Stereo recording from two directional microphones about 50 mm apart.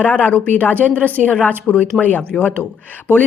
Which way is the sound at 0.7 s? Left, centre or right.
Right.